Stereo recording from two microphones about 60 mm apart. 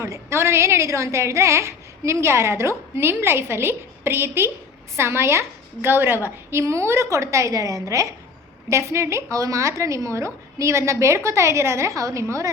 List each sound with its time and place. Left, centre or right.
0.0 s a woman's voice: right
6.2 s a woman's voice: right
8.7 s a woman's voice: right